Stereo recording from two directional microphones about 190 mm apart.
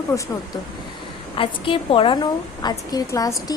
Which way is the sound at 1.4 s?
25° left (ahead or behind).